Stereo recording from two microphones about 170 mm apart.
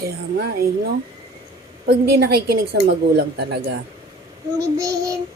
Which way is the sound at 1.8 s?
70° right (ahead or behind).